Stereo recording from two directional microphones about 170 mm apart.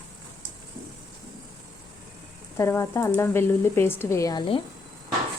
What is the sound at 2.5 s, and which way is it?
Speech, 15° left (ahead or behind).